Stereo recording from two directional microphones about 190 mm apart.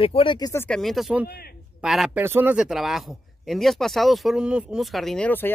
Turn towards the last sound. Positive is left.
turn(degrees=10)  # may be behind; listen again after turning